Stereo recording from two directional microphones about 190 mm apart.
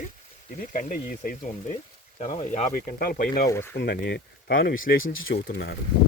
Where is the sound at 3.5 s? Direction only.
10° left (ahead or behind).